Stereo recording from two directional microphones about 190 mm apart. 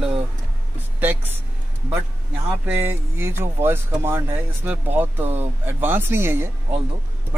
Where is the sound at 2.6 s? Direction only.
10° right (ahead or behind).